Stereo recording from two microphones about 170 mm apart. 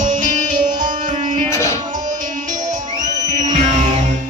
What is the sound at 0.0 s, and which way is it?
Music, 50° right (ahead or behind).